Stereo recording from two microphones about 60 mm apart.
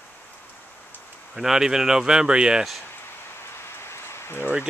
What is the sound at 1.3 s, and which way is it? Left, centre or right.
Speech, centre.